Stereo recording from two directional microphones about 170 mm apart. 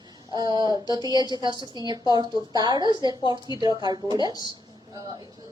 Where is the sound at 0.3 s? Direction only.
20° right (ahead or behind).